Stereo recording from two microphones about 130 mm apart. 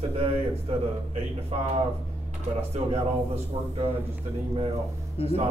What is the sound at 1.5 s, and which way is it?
Speech, 55° right (ahead or behind).